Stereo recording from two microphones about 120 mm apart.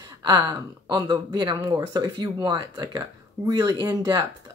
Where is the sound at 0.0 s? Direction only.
35° right (ahead or behind).